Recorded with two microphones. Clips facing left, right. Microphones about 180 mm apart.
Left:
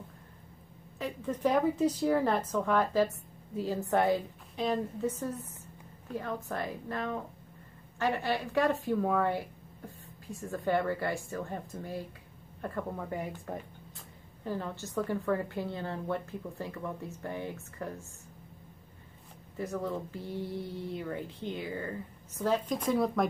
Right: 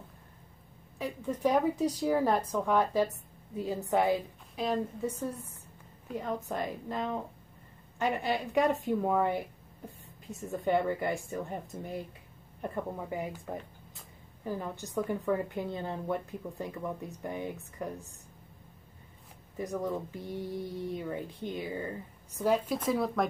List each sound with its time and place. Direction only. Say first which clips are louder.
0.9 s speech: even; 10° right (ahead or behind)
3.1 s a woman's voice: left 2 dB; centre (ahead or behind)
6.0 s a woman's voice: right 1 dB; 15° right (ahead or behind)
12.6 s speech: even; 15° right (ahead or behind)
19.5 s speech: right 1 dB; 15° right (ahead or behind)
22.8 s speech: left 2 dB; centre (ahead or behind)